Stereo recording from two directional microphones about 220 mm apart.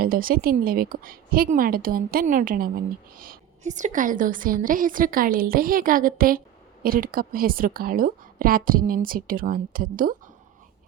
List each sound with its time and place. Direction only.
0.0 s a woman's voice: 40° right (ahead or behind)